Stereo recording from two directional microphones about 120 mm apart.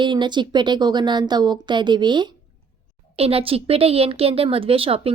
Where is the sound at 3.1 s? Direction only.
55° right (ahead or behind).